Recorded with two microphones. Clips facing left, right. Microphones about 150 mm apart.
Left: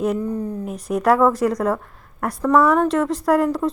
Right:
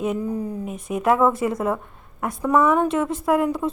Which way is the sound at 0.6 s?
Centre (ahead or behind).